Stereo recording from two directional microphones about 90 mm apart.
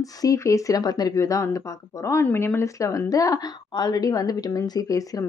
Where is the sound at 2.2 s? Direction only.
25° left (ahead or behind).